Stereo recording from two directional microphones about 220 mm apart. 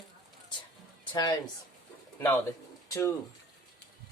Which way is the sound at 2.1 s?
10° left (ahead or behind).